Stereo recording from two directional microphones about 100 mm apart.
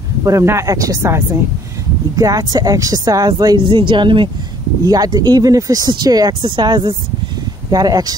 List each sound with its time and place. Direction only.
0.2 s speech: 30° right (ahead or behind); by 4.3 s 55° right (ahead or behind)
4.8 s speech: 40° right (ahead or behind)